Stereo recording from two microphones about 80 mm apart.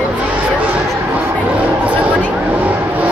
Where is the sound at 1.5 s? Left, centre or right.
Centre.